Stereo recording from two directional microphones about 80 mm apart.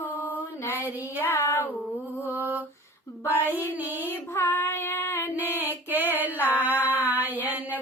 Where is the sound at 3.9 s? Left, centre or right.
Left.